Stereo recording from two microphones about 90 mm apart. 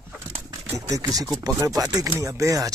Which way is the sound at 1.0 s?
45° right (ahead or behind).